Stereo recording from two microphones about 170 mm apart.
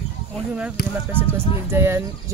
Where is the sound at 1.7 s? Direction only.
15° right (ahead or behind).